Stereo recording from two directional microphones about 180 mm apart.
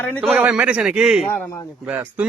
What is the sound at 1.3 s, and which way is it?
Speech, 15° left (ahead or behind).